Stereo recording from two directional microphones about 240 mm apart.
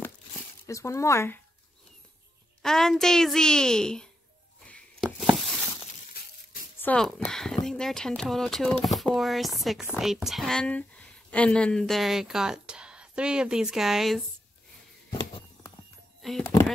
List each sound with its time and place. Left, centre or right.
0.7 s speech: centre
2.6 s speech: centre
4.6 s a sound: centre
6.0 s coin: left
6.8 s speech: centre
15.1 s a sound: centre
16.2 s speech: centre